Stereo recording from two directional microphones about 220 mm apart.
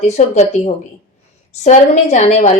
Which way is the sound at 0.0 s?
30° left (ahead or behind).